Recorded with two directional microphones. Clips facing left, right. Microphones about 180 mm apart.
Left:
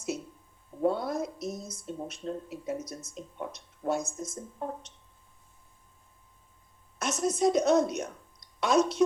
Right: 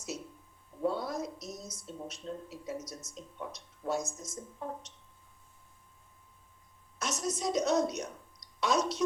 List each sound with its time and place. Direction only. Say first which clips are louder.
0.8 s a sound: left 5 dB; 55° left (ahead or behind)
2.8 s speech: left 4 dB; 55° left (ahead or behind)
7.0 s a woman's voice: left 8 dB; 55° left (ahead or behind)